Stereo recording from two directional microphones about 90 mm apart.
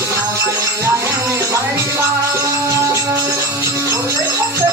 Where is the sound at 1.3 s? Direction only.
35° right (ahead or behind).